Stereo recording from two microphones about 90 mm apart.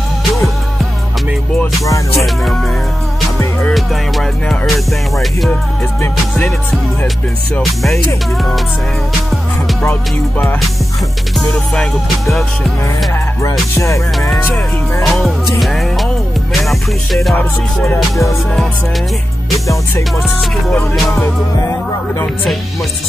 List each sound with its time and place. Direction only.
2.1 s music: centre (ahead or behind)
3.7 s music: centre (ahead or behind)
9.8 s music: 15° left (ahead or behind)
11.3 s music: 5° left (ahead or behind)
13.4 s music: 35° left (ahead or behind)
15.0 s music: 5° left (ahead or behind)